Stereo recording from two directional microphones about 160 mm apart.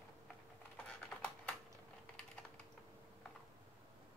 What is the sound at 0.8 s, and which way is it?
Typing, 10° left (ahead or behind).